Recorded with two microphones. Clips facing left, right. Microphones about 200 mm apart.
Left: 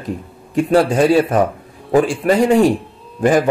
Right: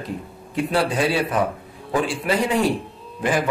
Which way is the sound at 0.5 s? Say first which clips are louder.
Left 8 dB; 45° left (ahead or behind).